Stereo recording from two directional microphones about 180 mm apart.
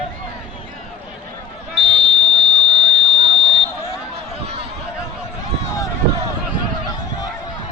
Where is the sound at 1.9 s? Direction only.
70° right (ahead or behind).